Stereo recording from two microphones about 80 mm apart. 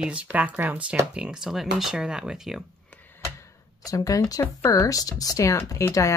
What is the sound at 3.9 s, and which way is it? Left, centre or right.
Speech, left.